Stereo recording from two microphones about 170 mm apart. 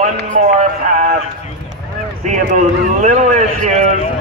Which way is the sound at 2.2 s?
45° right (ahead or behind).